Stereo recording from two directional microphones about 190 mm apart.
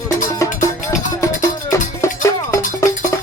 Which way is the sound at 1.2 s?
15° left (ahead or behind).